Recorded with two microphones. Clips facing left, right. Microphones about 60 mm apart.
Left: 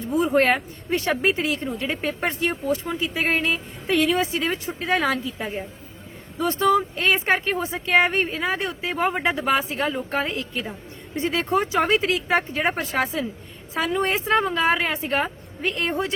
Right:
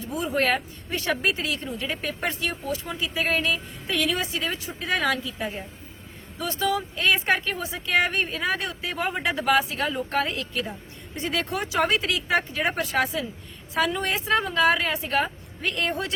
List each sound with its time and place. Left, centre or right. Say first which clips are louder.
0.1 s speech: left 5 dB; left
1.1 s speech: left 1 dB; left
4.2 s speech: left 5 dB; left
6.4 s speech: left 6 dB; left
6.9 s speech: left 2 dB; left
9.3 s speech: even; left
9.6 s speech: left 3 dB; left
10.1 s speech: left 1 dB; left
15.6 s speech: left 2 dB; left